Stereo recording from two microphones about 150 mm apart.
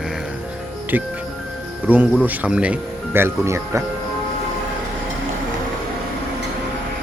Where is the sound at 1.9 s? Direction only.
10° right (ahead or behind).